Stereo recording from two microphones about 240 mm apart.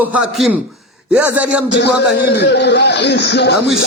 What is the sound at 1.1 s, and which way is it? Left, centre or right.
Speech, centre.